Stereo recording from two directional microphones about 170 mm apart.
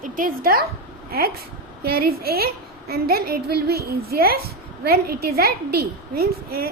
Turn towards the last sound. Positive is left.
turn(degrees=-65)  # may be behind; listen again after turning